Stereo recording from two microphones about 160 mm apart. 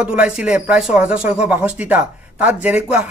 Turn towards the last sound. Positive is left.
turn(degrees=-10)  # may be behind; listen again after turning